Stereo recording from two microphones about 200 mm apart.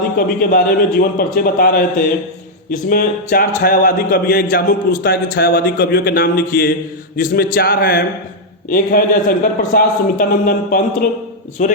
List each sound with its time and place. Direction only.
0.2 s speech: 45° left (ahead or behind)